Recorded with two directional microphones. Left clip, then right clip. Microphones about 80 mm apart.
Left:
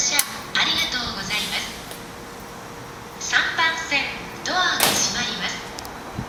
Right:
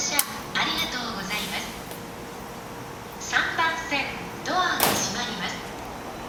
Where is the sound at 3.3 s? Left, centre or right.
Left.